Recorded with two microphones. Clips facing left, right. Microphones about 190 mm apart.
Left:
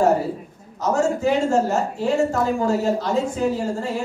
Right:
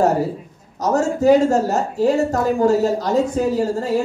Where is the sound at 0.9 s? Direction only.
40° right (ahead or behind).